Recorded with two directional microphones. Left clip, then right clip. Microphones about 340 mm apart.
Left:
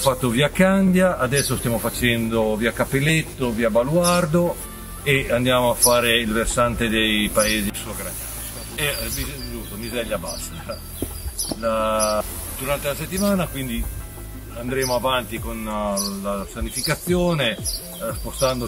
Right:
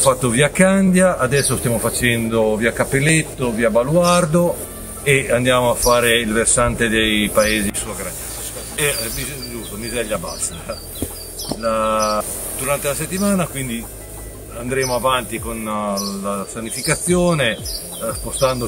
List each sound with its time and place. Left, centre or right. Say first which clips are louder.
0.0 s speech: right 4 dB; centre
11.6 s speech: right 3 dB; centre